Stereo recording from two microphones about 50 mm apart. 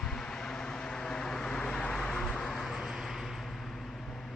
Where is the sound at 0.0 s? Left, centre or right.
Centre.